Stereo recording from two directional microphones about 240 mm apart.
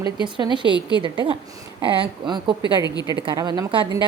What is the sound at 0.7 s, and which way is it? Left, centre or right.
Speech, centre.